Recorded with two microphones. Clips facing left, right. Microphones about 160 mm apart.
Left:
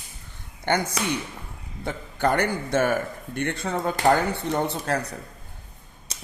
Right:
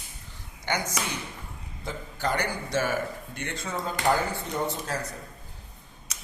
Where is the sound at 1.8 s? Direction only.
55° left (ahead or behind).